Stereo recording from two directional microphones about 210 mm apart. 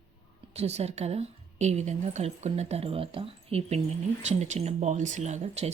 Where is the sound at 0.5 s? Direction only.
30° right (ahead or behind).